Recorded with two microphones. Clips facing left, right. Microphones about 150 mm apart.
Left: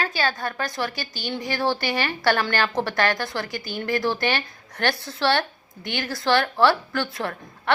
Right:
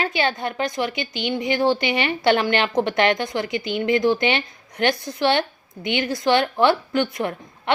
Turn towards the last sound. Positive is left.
turn(degrees=-20)  # may be behind; listen again after turning